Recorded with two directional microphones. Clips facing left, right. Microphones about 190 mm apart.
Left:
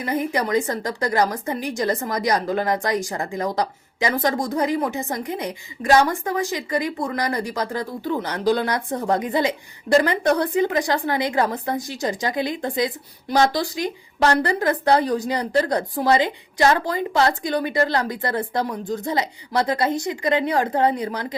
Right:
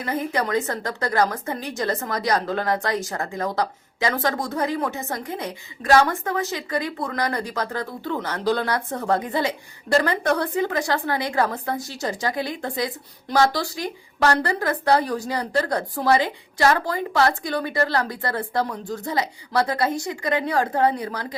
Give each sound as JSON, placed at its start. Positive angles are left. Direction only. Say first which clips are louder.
{"t": 0.0, "sound": "a woman's voice", "louder": "left 2 dB", "side_deg": 15}